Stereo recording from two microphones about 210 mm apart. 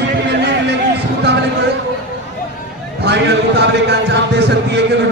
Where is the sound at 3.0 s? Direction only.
55° right (ahead or behind).